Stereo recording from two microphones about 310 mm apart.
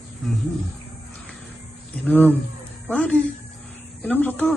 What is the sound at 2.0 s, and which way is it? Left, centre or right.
Speech, centre.